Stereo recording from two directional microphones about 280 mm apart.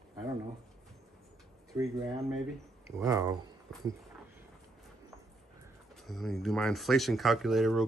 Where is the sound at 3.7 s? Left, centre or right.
Centre.